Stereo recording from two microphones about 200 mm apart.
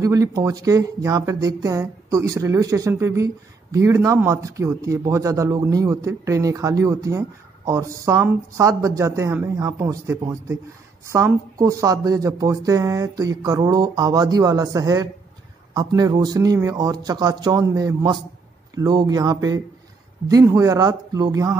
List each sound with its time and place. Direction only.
0.0 s a man's voice: 15° right (ahead or behind)